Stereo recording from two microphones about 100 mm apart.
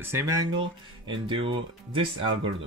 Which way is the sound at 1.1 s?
60° right (ahead or behind).